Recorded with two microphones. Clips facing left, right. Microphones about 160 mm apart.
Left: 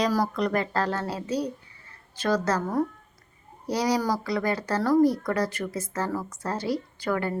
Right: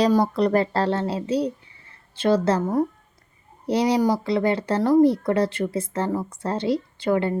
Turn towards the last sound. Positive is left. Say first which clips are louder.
# right 6 dB
turn(degrees=-25)  # may be behind; listen again after turning